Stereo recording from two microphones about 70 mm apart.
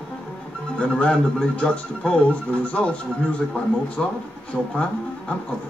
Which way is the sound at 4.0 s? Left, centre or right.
Centre.